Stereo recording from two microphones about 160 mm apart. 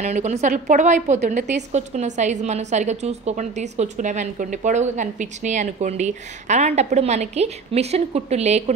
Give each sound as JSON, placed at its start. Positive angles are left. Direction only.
{"t": 0.0, "sound": "a woman's voice", "side_deg": -45}